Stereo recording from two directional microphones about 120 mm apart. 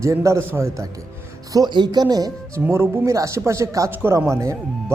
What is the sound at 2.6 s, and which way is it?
Speech, 20° right (ahead or behind).